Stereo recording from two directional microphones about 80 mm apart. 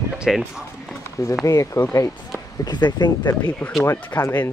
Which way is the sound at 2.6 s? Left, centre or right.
Left.